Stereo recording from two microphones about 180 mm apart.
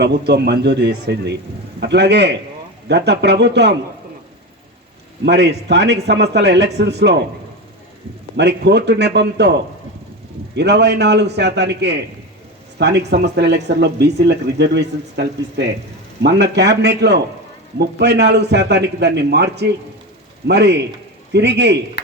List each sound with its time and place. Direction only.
0.0 s speech: 65° right (ahead or behind)
5.2 s speech: 70° right (ahead or behind)
8.4 s speech: 70° right (ahead or behind)
22.0 s a sound: 70° left (ahead or behind)